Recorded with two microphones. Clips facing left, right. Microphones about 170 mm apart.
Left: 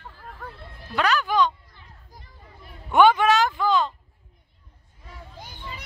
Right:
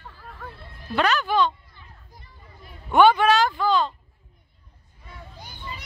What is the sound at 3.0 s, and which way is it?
Speech, 20° left (ahead or behind).